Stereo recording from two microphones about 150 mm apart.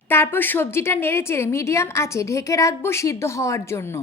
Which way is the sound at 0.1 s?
15° left (ahead or behind).